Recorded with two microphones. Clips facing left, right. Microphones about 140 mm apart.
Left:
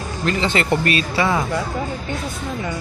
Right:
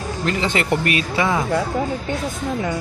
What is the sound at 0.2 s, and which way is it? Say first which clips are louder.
Speech: left 1 dB; 15° right (ahead or behind).